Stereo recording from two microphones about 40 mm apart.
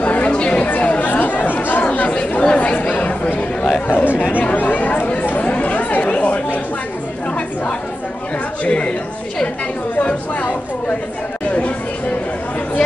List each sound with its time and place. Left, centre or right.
0.0 s chatter: left
0.7 s chatter: left
1.9 s chatter: left
3.8 s chatter: left
8.6 s a sound: left
9.9 s a sound: left